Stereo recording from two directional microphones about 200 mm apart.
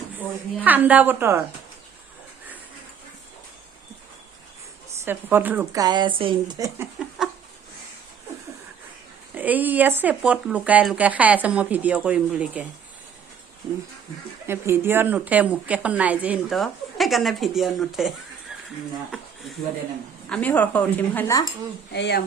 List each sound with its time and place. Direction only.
0.2 s a woman's voice: 10° right (ahead or behind)
5.0 s a woman's voice: 10° right (ahead or behind)
9.3 s a woman's voice: 10° right (ahead or behind)
14.4 s a woman's voice: 10° right (ahead or behind)
19.1 s speech: centre (ahead or behind)
21.9 s speech: 60° left (ahead or behind)